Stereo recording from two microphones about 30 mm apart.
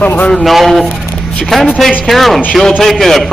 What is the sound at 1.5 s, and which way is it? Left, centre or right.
A man's voice, centre.